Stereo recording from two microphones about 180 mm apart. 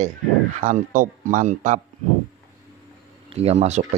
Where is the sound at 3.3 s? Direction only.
35° right (ahead or behind).